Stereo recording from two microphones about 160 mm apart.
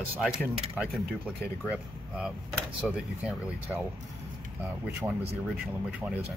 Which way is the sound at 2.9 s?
5° right (ahead or behind).